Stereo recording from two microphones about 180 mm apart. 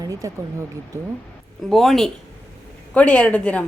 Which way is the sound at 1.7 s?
Centre (ahead or behind).